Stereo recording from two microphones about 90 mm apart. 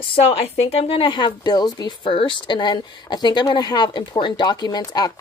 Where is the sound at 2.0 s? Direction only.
75° left (ahead or behind); by 5.1 s 45° left (ahead or behind).